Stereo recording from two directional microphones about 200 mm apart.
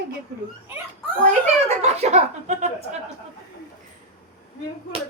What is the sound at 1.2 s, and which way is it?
Speech, 35° right (ahead or behind).